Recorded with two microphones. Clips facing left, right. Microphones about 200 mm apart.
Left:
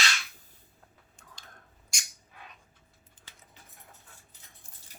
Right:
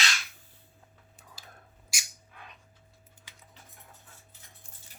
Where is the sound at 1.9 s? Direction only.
5° right (ahead or behind).